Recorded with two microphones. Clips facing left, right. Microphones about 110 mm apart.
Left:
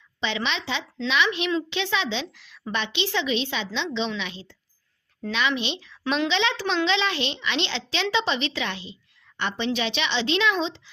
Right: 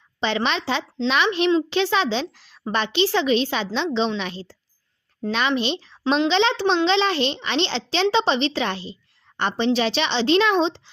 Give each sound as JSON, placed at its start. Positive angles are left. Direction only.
{"t": 0.2, "sound": "speech", "side_deg": -40}